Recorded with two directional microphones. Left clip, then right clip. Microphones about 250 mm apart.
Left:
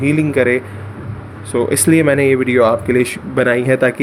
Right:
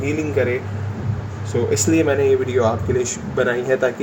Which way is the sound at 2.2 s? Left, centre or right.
Left.